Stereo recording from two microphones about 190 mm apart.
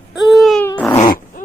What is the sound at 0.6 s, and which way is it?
Dog, 10° left (ahead or behind).